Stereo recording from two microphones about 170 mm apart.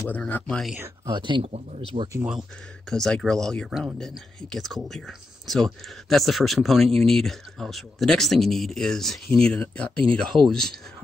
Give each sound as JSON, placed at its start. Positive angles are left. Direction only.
{"t": 0.1, "sound": "speech", "side_deg": 5}
{"t": 0.7, "sound": "speech", "side_deg": -15}
{"t": 1.1, "sound": "speech", "side_deg": -30}
{"t": 2.9, "sound": "speech", "side_deg": 5}